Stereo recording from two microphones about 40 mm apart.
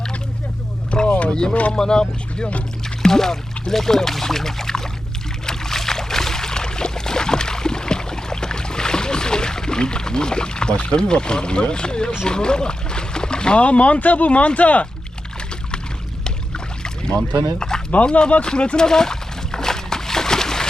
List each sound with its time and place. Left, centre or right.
0.9 s boat: centre
1.3 s speech: centre
5.5 s boat: centre
12.2 s speech: left
17.6 s speech: centre
18.9 s slosh: centre